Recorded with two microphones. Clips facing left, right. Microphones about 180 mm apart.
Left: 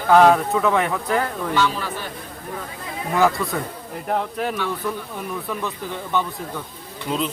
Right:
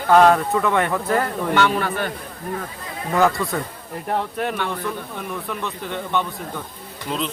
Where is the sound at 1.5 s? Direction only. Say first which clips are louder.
Right 3 dB; 60° right (ahead or behind).